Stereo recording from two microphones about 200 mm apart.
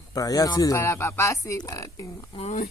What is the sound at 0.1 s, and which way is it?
Speech, 15° left (ahead or behind).